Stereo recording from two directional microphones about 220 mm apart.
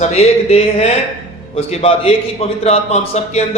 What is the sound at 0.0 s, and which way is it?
A man's voice, 30° left (ahead or behind).